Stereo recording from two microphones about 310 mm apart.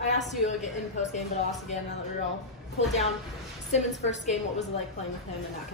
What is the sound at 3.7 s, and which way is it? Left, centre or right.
Speech, left.